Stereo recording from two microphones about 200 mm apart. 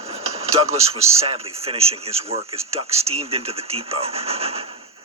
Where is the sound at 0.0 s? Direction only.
30° right (ahead or behind).